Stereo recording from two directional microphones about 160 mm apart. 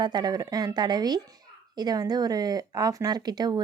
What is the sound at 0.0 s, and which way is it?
Speech, 25° right (ahead or behind).